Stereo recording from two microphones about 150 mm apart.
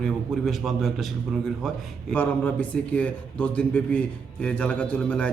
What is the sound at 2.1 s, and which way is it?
Speech, 10° left (ahead or behind).